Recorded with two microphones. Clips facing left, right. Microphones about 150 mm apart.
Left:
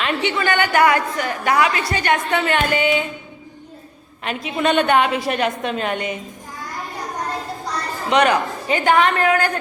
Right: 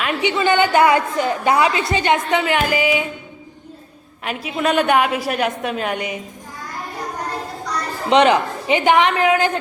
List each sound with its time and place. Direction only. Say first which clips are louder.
0.0 s a sound: even; 5° right (ahead or behind)
0.3 s a woman's voice: right 5 dB; 20° right (ahead or behind)
4.2 s a woman's voice: even; 5° right (ahead or behind)
8.1 s a woman's voice: right 3 dB; 25° right (ahead or behind)